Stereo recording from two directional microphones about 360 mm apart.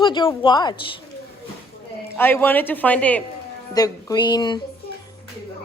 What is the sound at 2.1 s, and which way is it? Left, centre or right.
Speech, centre.